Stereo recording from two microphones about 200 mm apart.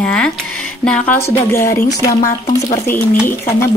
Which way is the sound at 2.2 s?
40° left (ahead or behind).